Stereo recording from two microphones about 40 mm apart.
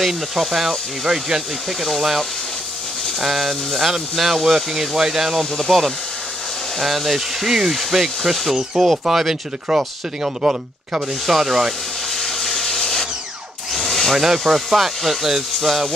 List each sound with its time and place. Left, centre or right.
0.0 s speech: centre
11.2 s speech: centre
12.1 s wood: centre
13.7 s tools: centre
14.2 s speech: centre